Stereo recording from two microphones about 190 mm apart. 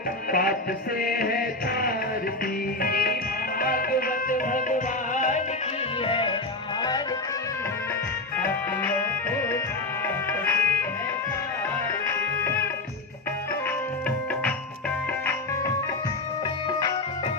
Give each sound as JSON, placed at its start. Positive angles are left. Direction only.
{"t": 0.3, "sound": "music", "side_deg": 50}
{"t": 6.1, "sound": "music", "side_deg": 25}
{"t": 8.4, "sound": "music", "side_deg": 10}
{"t": 10.4, "sound": "music", "side_deg": 10}